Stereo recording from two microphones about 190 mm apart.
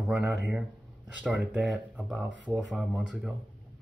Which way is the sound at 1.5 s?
5° right (ahead or behind).